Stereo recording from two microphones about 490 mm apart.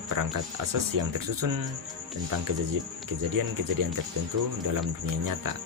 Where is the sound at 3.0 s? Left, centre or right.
Right.